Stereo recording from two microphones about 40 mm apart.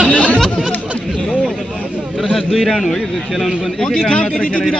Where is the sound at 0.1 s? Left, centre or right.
Left.